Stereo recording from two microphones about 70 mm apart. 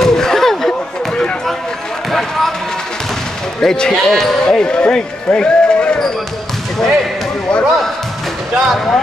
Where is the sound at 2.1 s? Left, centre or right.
Centre.